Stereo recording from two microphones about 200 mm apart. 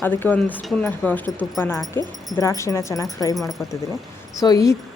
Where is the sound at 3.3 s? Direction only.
Centre (ahead or behind).